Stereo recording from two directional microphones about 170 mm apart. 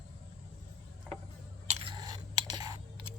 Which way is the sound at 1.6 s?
35° right (ahead or behind).